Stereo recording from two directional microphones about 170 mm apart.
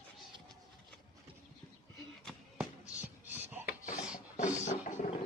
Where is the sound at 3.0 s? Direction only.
10° right (ahead or behind).